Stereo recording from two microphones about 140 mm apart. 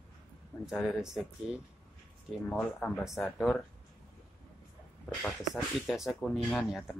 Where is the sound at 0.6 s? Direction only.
5° right (ahead or behind).